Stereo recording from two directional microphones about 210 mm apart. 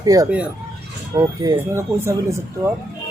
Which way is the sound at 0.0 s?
15° right (ahead or behind).